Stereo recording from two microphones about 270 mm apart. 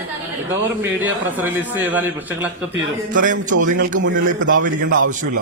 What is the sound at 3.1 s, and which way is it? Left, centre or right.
A man's voice, right.